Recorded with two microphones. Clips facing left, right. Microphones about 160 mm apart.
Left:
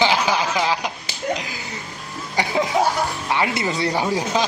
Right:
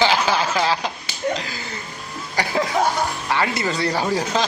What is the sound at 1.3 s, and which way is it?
Slap, 15° left (ahead or behind).